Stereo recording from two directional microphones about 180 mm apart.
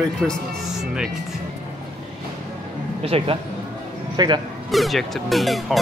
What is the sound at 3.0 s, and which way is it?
Speech, 30° right (ahead or behind).